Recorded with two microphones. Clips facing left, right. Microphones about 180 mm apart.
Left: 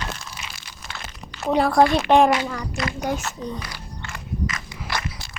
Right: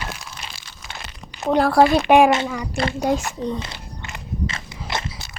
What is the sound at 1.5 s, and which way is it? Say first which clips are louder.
Speech: right 2 dB; centre (ahead or behind).